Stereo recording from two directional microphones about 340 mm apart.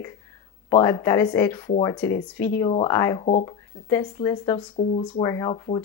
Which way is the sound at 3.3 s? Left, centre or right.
Left.